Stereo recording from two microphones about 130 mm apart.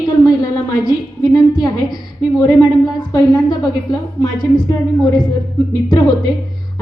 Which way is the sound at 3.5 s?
30° left (ahead or behind).